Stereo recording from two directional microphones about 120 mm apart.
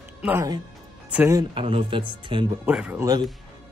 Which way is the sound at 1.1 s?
10° right (ahead or behind).